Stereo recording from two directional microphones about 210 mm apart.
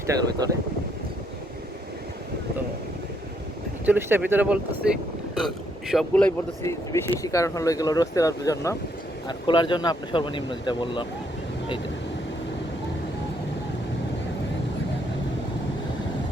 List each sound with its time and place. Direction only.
0.4 s speech: 20° right (ahead or behind)
3.8 s speech: 10° right (ahead or behind)
6.6 s speech: 15° left (ahead or behind)